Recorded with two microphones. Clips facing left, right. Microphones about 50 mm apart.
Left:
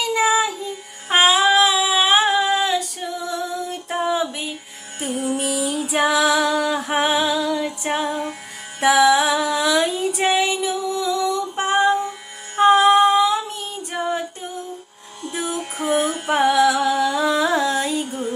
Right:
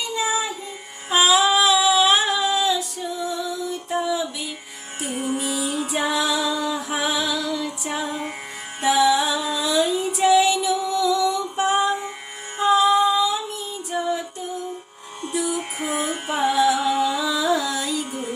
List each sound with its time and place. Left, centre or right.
0.0 s child singing: left
1.1 s female singing: left
3.3 s music: left
5.5 s music: right
5.9 s female singing: left
8.8 s music: left
10.2 s music: left
12.5 s female singing: left
15.3 s music: left
16.3 s music: left